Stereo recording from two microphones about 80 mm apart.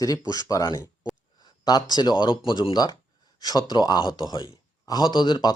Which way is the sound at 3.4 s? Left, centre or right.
Left.